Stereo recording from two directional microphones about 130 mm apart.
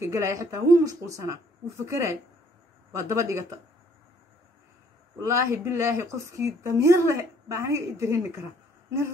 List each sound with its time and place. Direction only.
0.0 s a woman's voice: 20° right (ahead or behind)
5.2 s a woman's voice: 20° right (ahead or behind)